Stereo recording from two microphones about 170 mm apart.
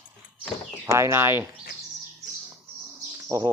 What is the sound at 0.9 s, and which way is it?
Speech, 15° right (ahead or behind).